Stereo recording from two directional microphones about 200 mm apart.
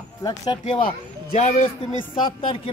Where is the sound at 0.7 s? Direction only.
30° left (ahead or behind).